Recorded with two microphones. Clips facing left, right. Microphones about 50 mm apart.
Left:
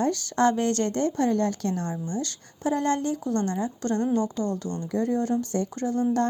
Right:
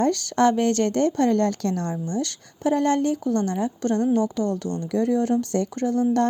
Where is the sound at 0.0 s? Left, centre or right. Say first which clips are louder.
Right 4 dB; right.